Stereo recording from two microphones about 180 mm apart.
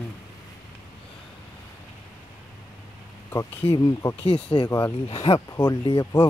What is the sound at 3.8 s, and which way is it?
Speech, 20° left (ahead or behind).